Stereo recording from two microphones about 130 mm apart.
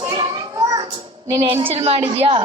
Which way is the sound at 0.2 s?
30° right (ahead or behind).